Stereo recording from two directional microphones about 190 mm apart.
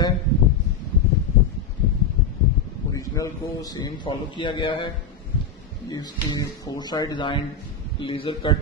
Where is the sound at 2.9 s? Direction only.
15° left (ahead or behind).